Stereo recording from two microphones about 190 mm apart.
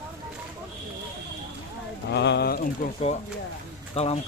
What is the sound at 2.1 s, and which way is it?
Speech, 65° left (ahead or behind).